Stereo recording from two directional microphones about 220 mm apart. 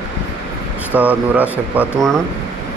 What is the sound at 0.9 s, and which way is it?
Speech, 5° right (ahead or behind).